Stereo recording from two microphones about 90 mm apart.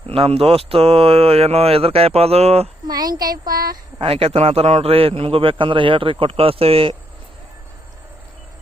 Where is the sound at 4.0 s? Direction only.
90° right.